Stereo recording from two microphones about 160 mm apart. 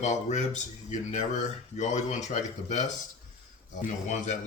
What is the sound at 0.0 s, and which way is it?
Speech, 45° left (ahead or behind).